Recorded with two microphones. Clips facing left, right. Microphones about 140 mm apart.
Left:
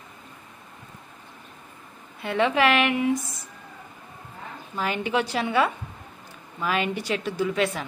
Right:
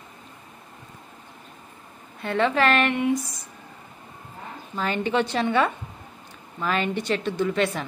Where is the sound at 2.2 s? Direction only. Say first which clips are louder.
Even; 10° left (ahead or behind).